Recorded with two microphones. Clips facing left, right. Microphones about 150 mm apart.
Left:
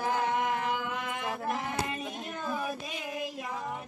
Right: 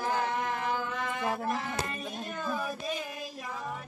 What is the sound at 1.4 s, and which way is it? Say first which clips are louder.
Child singing: even; 15° left (ahead or behind).